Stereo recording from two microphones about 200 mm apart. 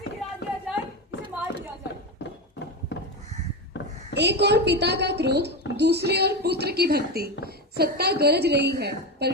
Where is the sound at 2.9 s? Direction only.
60° left (ahead or behind).